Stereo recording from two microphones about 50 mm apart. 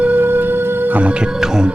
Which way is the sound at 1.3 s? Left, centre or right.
Centre.